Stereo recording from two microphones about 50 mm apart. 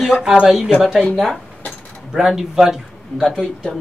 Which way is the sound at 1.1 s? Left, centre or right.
Centre.